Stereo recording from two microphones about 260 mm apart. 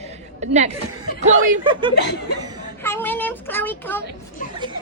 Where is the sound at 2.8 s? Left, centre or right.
Centre.